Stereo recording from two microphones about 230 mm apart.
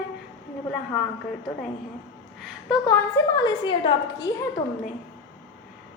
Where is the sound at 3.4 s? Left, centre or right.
Centre.